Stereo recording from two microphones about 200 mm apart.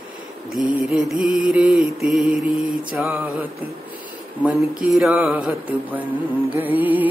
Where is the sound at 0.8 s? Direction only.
Centre (ahead or behind).